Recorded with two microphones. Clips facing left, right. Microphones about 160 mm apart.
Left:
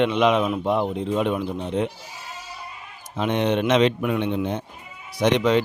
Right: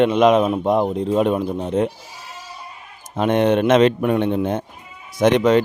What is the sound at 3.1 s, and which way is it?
Speech, 50° right (ahead or behind).